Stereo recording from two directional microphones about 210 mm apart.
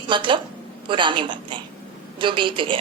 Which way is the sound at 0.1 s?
25° right (ahead or behind).